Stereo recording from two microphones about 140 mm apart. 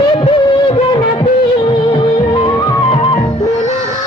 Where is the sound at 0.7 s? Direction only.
40° left (ahead or behind).